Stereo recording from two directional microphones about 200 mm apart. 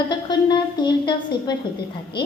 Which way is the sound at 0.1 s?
20° left (ahead or behind).